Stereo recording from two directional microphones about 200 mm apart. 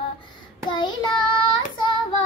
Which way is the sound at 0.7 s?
25° left (ahead or behind).